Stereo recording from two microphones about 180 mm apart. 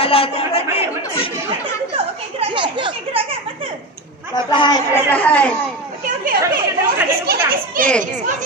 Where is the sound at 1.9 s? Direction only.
30° right (ahead or behind).